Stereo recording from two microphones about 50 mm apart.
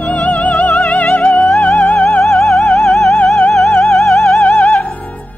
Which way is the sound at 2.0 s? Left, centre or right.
Centre.